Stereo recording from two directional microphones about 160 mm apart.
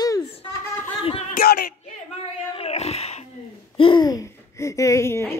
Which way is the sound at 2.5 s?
40° left (ahead or behind).